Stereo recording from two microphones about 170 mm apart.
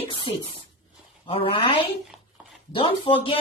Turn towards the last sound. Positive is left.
turn(degrees=30)  # may be behind; listen again after turning